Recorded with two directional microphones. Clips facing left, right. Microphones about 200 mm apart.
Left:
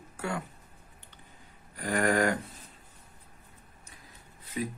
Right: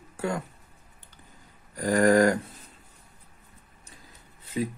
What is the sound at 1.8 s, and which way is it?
Speech, 40° right (ahead or behind).